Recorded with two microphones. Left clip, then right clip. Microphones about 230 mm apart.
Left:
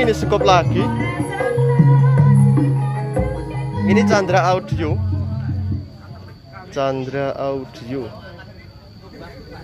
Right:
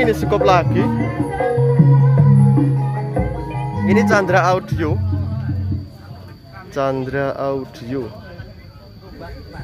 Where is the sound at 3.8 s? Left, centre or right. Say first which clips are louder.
Right 1 dB; centre.